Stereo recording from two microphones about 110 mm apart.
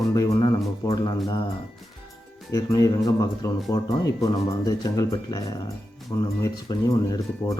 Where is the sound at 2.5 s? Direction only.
35° left (ahead or behind).